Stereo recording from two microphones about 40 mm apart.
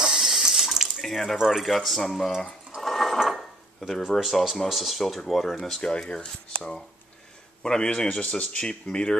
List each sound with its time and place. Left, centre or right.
0.0 s water: centre
1.0 s speech: centre
2.8 s ratchet: centre
3.8 s speech: centre
5.8 s speech: left